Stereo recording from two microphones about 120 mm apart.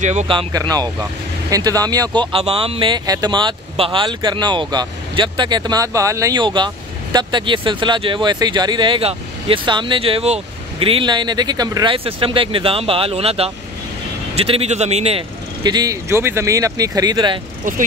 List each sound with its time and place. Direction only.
0.0 s speech: 75° right (ahead or behind)
0.5 s speech: 30° right (ahead or behind)
2.3 s speech: 50° right (ahead or behind); by 6.3 s 25° right (ahead or behind)
6.3 s speech: 40° right (ahead or behind); by 15.2 s 60° right (ahead or behind)
15.6 s speech: 35° right (ahead or behind)
17.6 s speech: 90° right